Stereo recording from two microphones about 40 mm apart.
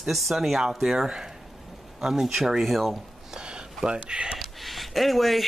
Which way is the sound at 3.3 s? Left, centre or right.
Right.